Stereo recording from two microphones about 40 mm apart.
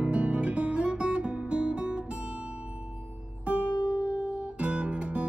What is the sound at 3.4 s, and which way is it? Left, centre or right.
Music, right.